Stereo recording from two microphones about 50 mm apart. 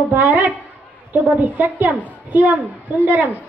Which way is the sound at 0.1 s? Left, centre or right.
Right.